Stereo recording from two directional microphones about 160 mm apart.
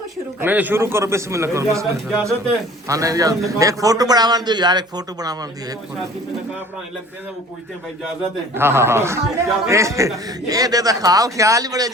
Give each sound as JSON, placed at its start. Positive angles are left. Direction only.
{"t": 0.3, "sound": "a man's voice", "side_deg": -10}
{"t": 8.5, "sound": "a man's voice", "side_deg": -15}